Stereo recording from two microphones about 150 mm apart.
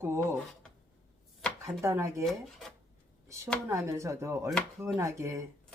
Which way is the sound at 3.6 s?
20° right (ahead or behind).